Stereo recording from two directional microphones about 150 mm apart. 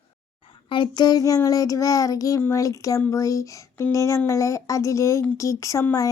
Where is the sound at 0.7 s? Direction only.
30° left (ahead or behind).